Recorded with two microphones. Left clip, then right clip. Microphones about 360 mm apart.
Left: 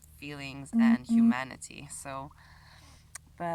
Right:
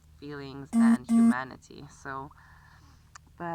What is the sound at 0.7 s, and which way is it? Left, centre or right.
Speech, right.